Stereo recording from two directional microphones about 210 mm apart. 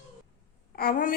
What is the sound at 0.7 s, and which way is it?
Speech, 45° left (ahead or behind).